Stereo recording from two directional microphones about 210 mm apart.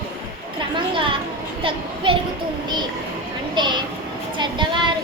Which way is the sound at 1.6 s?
25° right (ahead or behind).